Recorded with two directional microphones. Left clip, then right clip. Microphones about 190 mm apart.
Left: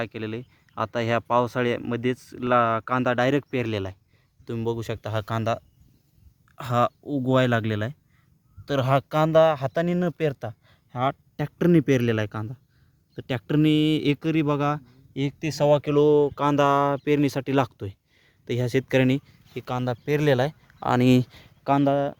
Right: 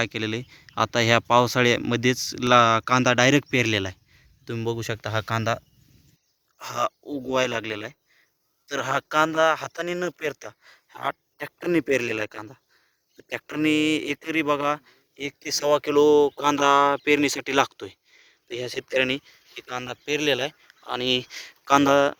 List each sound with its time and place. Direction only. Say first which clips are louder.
0.0 s speech: right 4 dB; 15° right (ahead or behind)
1.5 s speech: right 4 dB; 10° right (ahead or behind)
4.4 s speech: even; 15° left (ahead or behind)
6.7 s speech: left 3 dB; 5° left (ahead or behind); by 21.2 s 25° left (ahead or behind)
21.7 s speech: right 4 dB; 35° right (ahead or behind)